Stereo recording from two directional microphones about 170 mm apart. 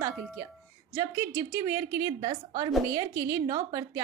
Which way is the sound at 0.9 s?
15° right (ahead or behind).